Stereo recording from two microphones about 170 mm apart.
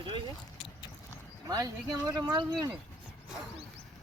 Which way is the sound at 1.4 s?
20° right (ahead or behind).